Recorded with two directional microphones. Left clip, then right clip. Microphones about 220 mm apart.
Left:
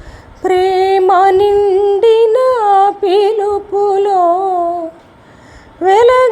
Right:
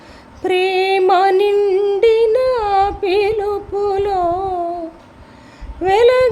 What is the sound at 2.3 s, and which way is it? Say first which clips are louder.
Humming: left 5 dB; 5° left (ahead or behind).